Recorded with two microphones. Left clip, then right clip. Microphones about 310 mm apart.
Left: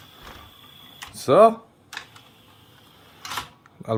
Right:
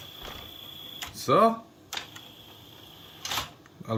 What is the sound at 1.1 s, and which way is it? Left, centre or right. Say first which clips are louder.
Speech: left 7 dB; centre.